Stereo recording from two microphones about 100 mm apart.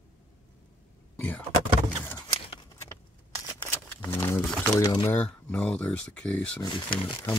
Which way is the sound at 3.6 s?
20° left (ahead or behind).